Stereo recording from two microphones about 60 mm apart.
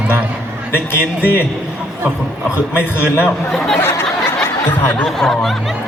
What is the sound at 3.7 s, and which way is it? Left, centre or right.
Speech, left.